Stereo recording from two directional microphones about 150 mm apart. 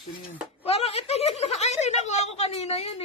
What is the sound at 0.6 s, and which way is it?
A woman's voice, 40° left (ahead or behind).